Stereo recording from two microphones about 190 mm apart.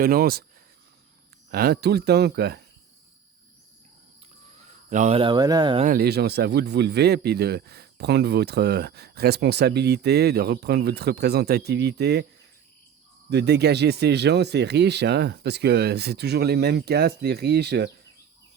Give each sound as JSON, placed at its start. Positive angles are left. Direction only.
{"t": 0.0, "sound": "speech", "side_deg": -50}
{"t": 1.5, "sound": "speech", "side_deg": -55}
{"t": 4.9, "sound": "speech", "side_deg": -40}
{"t": 5.8, "sound": "speech", "side_deg": -50}
{"t": 13.3, "sound": "speech", "side_deg": -60}